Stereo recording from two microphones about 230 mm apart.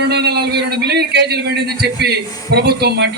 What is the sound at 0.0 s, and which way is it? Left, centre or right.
A man's voice, right.